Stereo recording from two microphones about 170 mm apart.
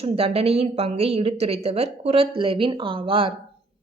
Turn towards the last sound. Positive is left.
turn(degrees=-30)  # may be behind; listen again after turning